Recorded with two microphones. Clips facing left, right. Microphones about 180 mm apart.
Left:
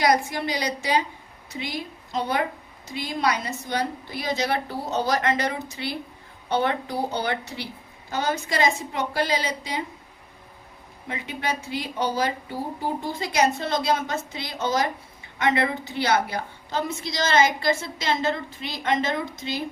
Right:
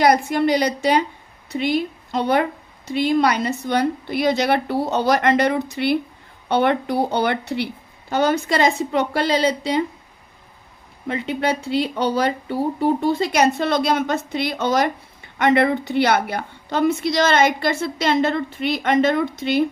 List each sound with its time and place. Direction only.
0.0 s a woman's voice: 60° right (ahead or behind)
11.1 s a woman's voice: 65° right (ahead or behind)